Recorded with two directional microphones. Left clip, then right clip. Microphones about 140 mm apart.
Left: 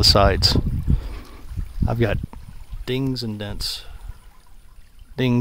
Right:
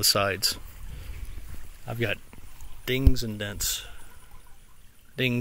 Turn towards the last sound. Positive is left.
turn(degrees=30)  # may be behind; listen again after turning